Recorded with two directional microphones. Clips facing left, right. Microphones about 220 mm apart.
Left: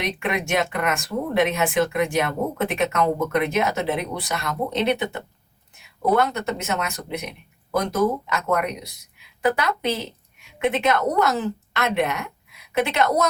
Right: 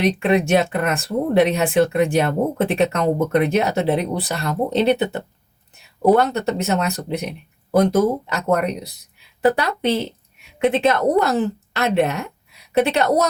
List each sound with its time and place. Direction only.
0.0 s a woman's voice: 35° right (ahead or behind)